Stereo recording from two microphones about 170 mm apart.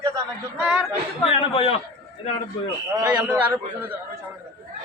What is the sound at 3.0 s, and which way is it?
Speech, 10° right (ahead or behind).